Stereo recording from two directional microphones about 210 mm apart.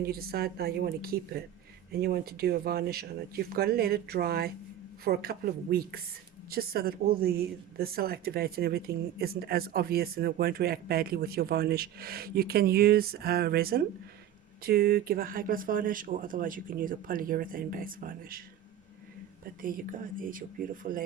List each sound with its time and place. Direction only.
0.0 s a woman's voice: 45° right (ahead or behind)
19.6 s speech: 40° right (ahead or behind)